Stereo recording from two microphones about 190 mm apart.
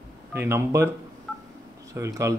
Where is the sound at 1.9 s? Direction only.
15° right (ahead or behind).